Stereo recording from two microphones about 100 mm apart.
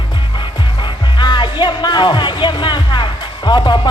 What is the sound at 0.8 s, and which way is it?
Music, 50° left (ahead or behind).